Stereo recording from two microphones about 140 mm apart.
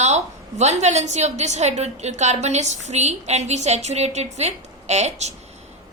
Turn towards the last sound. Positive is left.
turn(degrees=-55)  # may be behind; listen again after turning